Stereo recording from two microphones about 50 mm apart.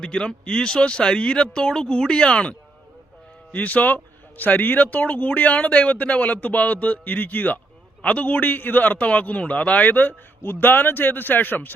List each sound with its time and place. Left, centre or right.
0.0 s a man's voice: centre; by 11.7 s left